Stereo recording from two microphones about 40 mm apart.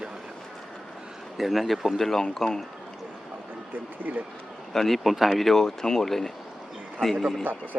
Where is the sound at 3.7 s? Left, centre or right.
Right.